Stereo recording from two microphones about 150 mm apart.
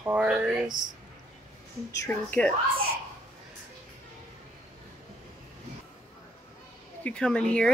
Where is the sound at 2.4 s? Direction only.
5° left (ahead or behind).